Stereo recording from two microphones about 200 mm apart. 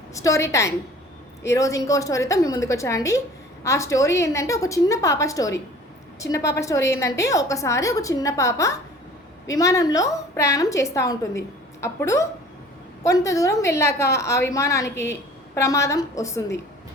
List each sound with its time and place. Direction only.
0.1 s a woman's voice: 15° left (ahead or behind)